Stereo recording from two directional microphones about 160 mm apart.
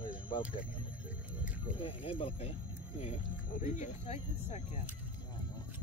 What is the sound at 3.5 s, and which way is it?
Speech, 50° left (ahead or behind).